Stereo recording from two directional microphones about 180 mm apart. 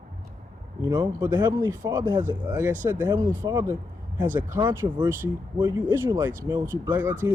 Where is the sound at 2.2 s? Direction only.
10° right (ahead or behind).